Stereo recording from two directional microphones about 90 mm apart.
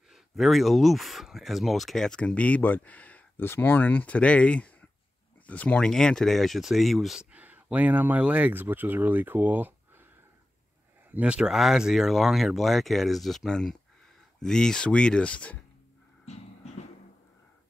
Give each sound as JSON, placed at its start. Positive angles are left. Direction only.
{"t": 0.1, "sound": "speech", "side_deg": 0}
{"t": 7.3, "sound": "speech", "side_deg": -20}
{"t": 11.1, "sound": "speech", "side_deg": -15}